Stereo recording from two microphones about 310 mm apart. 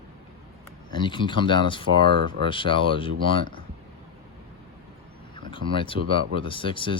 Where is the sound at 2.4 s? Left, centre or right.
Centre.